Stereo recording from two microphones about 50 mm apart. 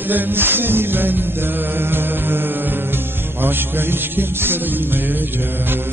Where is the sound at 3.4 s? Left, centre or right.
Right.